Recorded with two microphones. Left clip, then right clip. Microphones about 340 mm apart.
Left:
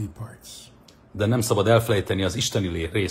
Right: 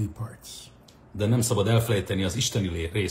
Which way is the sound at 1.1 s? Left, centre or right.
Centre.